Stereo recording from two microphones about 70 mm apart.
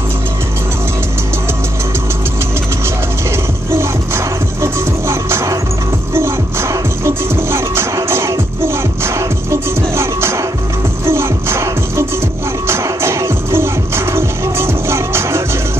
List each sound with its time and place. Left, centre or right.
3.3 s music: right